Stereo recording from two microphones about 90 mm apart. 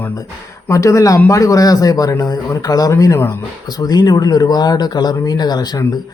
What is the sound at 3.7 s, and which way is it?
Speech, 45° left (ahead or behind).